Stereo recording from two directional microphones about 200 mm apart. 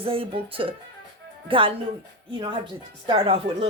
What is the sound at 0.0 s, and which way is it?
Speech, 25° right (ahead or behind).